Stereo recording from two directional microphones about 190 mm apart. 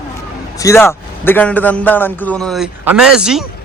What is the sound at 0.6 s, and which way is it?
A man's voice, 15° left (ahead or behind).